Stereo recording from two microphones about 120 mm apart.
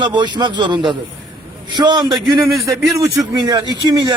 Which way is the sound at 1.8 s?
35° right (ahead or behind).